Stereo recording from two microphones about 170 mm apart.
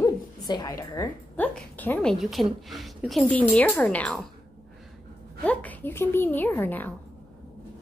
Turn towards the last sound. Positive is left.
turn(degrees=10)  # may be behind; listen again after turning